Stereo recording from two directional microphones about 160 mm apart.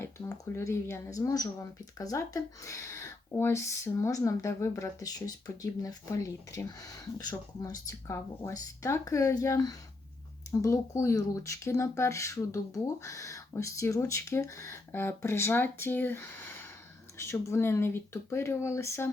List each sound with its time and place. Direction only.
0.0 s speech: 20° left (ahead or behind)